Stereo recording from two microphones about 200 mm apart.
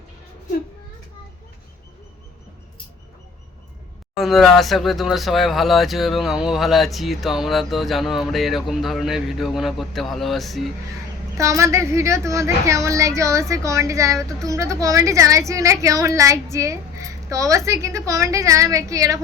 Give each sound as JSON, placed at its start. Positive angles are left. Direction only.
{"t": 4.2, "sound": "speech", "side_deg": 0}
{"t": 11.3, "sound": "a woman's voice", "side_deg": -15}